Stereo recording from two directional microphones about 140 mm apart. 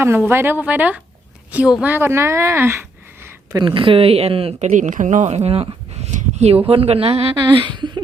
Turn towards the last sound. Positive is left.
turn(degrees=-35)  # may be behind; listen again after turning